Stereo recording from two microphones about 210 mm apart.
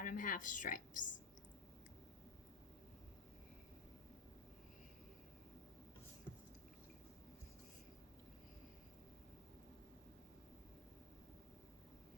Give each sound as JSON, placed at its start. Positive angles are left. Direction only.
{"t": 0.0, "sound": "a woman's voice", "side_deg": 40}